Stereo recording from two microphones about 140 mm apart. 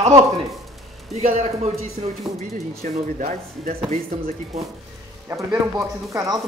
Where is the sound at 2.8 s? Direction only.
65° right (ahead or behind).